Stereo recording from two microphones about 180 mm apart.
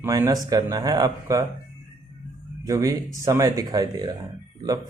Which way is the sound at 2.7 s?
20° right (ahead or behind).